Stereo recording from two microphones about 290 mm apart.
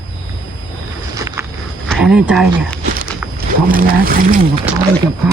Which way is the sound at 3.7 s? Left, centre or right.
Right.